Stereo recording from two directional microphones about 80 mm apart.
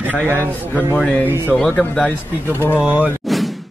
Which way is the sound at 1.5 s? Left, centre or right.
Centre.